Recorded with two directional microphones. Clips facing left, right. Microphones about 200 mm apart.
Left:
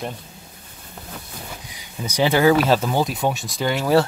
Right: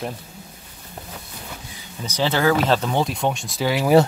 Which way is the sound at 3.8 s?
15° right (ahead or behind).